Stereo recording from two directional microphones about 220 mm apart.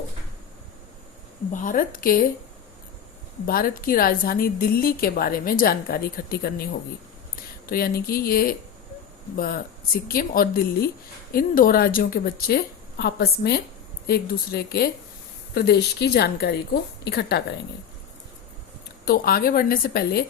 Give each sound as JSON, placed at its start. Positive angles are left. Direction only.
{"t": 1.6, "sound": "a woman's voice", "side_deg": 40}
{"t": 3.4, "sound": "a woman's voice", "side_deg": 40}
{"t": 7.7, "sound": "a woman's voice", "side_deg": 45}
{"t": 19.0, "sound": "a woman's voice", "side_deg": 45}